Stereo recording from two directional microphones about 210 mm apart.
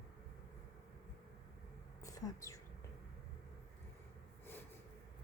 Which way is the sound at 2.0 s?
15° left (ahead or behind).